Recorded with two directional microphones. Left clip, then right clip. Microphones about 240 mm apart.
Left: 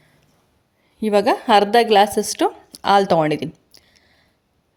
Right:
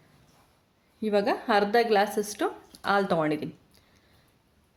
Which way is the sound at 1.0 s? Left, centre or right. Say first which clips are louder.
Left 9 dB; left.